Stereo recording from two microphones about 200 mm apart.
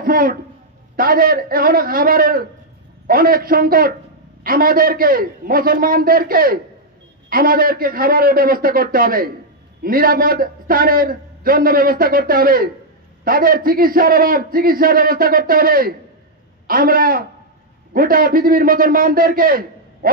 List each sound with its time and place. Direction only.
0.0 s a man's voice: 45° right (ahead or behind)